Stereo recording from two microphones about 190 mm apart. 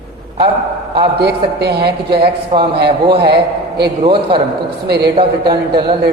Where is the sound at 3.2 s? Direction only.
60° right (ahead or behind).